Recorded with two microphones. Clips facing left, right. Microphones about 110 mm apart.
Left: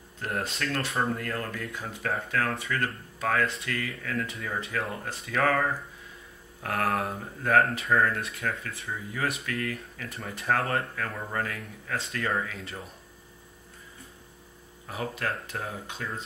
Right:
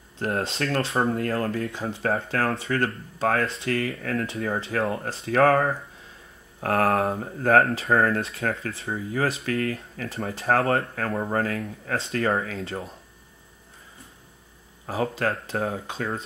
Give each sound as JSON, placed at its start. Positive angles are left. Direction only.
{"t": 0.2, "sound": "speech", "side_deg": -30}
{"t": 7.9, "sound": "speech", "side_deg": -45}
{"t": 8.2, "sound": "speech", "side_deg": -30}
{"t": 14.9, "sound": "speech", "side_deg": -35}